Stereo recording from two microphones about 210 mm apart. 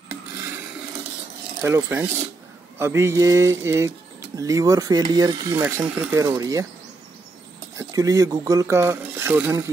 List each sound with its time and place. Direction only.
1.6 s speech: 10° right (ahead or behind)
7.7 s speech: 15° right (ahead or behind)